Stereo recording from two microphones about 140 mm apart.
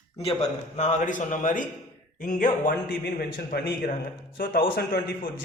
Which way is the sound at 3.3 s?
90° left.